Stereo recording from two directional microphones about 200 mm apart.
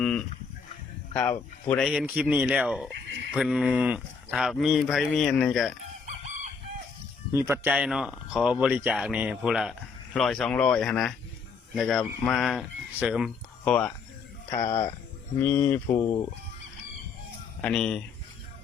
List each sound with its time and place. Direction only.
0.0 s livestock: 5° left (ahead or behind)
1.1 s speech: 5° left (ahead or behind)
6.1 s chicken: 40° right (ahead or behind)
7.3 s speech: 10° right (ahead or behind); by 13.9 s 5° left (ahead or behind)
15.4 s speech: 10° left (ahead or behind)
15.9 s speech: 25° left (ahead or behind)
17.6 s speech: 5° left (ahead or behind)